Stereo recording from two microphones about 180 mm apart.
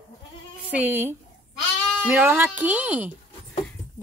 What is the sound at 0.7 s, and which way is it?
Speech, 10° right (ahead or behind).